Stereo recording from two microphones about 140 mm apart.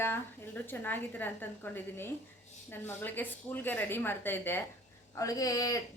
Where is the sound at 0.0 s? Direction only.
15° left (ahead or behind).